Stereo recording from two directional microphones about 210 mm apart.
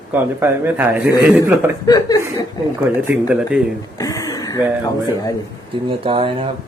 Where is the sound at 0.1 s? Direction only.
10° right (ahead or behind).